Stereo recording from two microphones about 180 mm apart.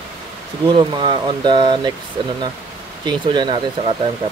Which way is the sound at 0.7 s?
25° right (ahead or behind).